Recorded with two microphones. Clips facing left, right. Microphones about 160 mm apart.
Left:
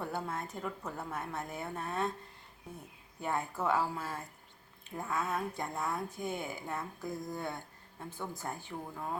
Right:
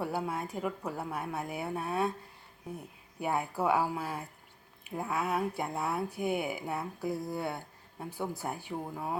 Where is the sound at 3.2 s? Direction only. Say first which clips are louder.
Right 3 dB; 10° right (ahead or behind).